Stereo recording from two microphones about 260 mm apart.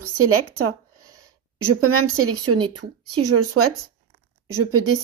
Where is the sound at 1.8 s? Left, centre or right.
Right.